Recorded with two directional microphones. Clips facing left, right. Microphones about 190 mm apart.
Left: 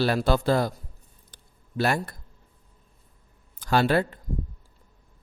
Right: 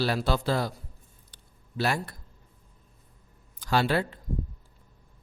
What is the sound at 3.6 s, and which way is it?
Speech, 50° left (ahead or behind).